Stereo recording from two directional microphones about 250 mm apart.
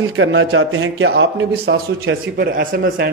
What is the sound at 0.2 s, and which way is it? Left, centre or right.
A man's voice, right.